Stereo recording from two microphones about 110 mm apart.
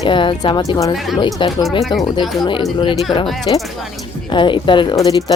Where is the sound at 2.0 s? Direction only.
40° left (ahead or behind).